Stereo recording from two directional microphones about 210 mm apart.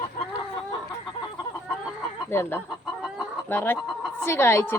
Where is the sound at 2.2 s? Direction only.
10° left (ahead or behind).